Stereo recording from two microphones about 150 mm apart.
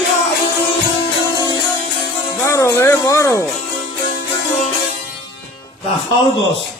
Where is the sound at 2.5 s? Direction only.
20° left (ahead or behind).